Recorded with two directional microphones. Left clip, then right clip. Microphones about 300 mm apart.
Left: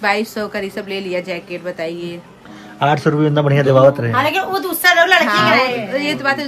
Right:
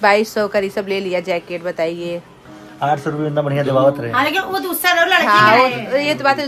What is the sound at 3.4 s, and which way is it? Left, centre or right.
A woman's voice, left.